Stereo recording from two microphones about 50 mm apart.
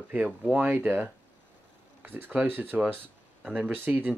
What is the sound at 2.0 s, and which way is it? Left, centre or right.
Speech, right.